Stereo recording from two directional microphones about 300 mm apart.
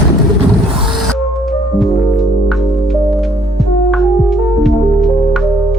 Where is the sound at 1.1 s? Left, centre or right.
Centre.